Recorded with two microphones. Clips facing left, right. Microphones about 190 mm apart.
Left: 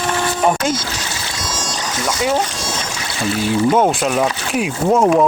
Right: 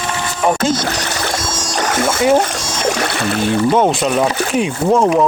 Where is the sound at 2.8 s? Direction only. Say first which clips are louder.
Right 10 dB; 60° right (ahead or behind).